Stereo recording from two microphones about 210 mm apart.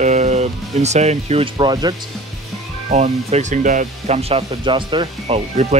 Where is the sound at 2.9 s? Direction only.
30° right (ahead or behind).